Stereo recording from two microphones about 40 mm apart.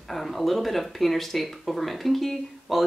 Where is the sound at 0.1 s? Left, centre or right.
Centre.